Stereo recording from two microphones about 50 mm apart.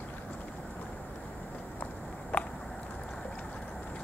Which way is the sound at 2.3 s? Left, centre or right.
Left.